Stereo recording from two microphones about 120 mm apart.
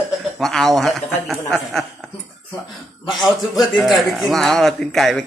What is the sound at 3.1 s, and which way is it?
A man's voice, centre (ahead or behind).